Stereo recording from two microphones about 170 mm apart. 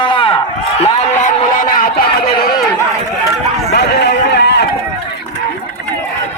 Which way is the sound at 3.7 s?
80° left.